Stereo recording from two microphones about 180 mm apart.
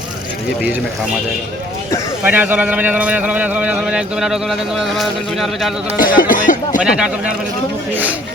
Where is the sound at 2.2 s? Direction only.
10° right (ahead or behind).